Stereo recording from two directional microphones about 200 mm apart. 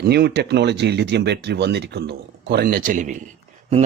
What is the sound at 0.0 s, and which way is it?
Speech, 55° right (ahead or behind).